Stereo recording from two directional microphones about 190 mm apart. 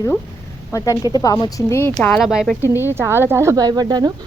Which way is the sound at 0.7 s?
20° left (ahead or behind).